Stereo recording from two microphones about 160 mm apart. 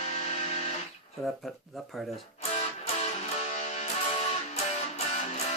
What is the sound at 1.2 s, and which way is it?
Speech, centre (ahead or behind).